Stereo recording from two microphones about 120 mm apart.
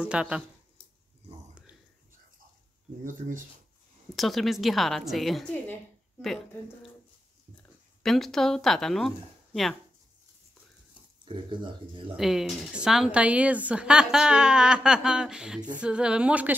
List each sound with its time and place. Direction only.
0.0 s a woman's voice: 10° right (ahead or behind)
3.0 s speech: 90° right
4.1 s a woman's voice: centre (ahead or behind)
8.0 s a woman's voice: centre (ahead or behind)
11.2 s speech: 40° right (ahead or behind)
12.2 s a woman's voice: 5° right (ahead or behind)